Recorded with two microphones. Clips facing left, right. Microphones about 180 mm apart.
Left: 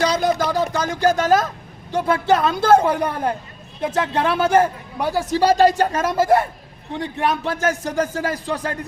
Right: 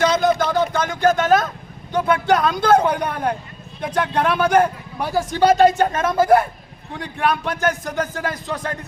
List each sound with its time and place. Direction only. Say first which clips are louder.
0.4 s a sound: right 1 dB; 10° left (ahead or behind)
0.8 s a man's voice: left 1 dB; 35° left (ahead or behind)
4.9 s a man's voice: even; centre (ahead or behind)
5.3 s speech: right 1 dB; 35° left (ahead or behind)